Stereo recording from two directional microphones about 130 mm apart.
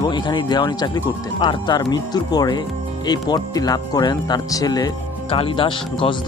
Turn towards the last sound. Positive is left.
turn(degrees=40)  # may be behind; listen again after turning